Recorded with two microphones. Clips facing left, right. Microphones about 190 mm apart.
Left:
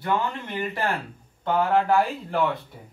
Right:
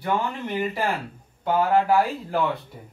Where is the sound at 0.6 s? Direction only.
10° right (ahead or behind).